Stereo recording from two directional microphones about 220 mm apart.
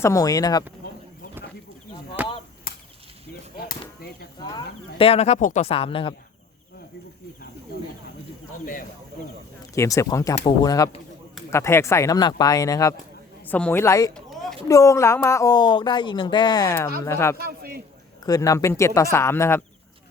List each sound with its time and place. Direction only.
0.0 s speech: 15° left (ahead or behind)
2.2 s chop: 10° right (ahead or behind)
2.7 s chop: 40° left (ahead or behind)
4.4 s speech: 25° left (ahead or behind)
9.7 s speech: 15° left (ahead or behind)
14.1 s a sound: centre (ahead or behind)
14.7 s speech: 15° left (ahead or behind)
17.3 s a man's voice: 45° right (ahead or behind)
18.2 s speech: 15° left (ahead or behind)